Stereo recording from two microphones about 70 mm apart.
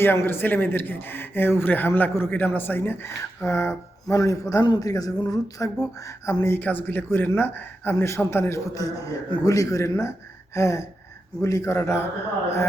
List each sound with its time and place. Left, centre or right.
0.0 s speech: left
4.2 s a man's voice: left
4.6 s a man's voice: left
4.9 s a sound: left
5.8 s a man's voice: left
6.6 s a man's voice: left